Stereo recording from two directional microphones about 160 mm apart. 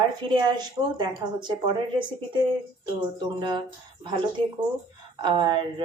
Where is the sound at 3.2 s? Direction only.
25° right (ahead or behind).